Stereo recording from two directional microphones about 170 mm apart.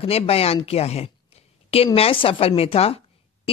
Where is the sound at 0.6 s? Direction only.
35° left (ahead or behind).